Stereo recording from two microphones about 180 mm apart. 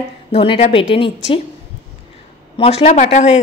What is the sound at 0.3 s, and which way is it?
A woman's voice, 35° left (ahead or behind).